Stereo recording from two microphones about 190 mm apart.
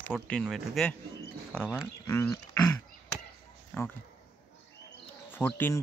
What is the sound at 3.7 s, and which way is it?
Speech, 5° left (ahead or behind).